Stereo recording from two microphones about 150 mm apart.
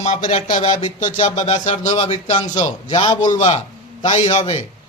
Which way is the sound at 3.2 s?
55° left (ahead or behind).